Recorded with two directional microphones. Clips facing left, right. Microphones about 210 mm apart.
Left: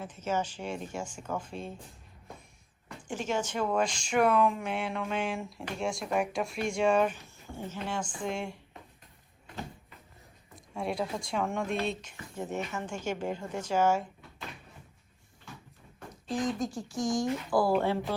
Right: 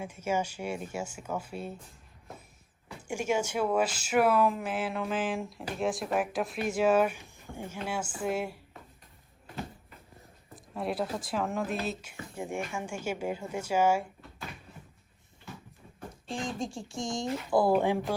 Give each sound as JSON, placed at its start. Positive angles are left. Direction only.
{"t": 0.0, "sound": "speech", "side_deg": -10}
{"t": 3.1, "sound": "speech", "side_deg": -10}
{"t": 10.5, "sound": "speech", "side_deg": 0}
{"t": 16.3, "sound": "speech", "side_deg": -25}